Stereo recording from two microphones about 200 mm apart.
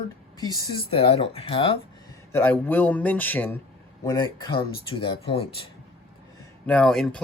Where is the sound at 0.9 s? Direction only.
30° left (ahead or behind).